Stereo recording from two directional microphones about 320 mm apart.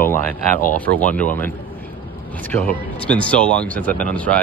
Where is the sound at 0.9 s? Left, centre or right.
Right.